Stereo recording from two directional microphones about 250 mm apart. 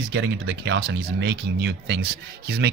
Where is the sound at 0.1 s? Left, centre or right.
Right.